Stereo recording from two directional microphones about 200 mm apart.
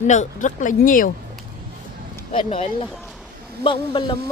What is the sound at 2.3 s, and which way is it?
Speech, 30° left (ahead or behind).